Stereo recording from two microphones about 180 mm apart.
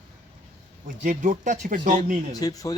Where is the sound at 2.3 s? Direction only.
20° left (ahead or behind).